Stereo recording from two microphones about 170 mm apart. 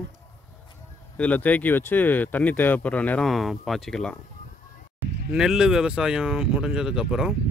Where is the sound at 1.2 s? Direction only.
10° left (ahead or behind).